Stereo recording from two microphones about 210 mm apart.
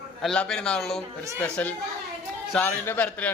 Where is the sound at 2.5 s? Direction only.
10° left (ahead or behind).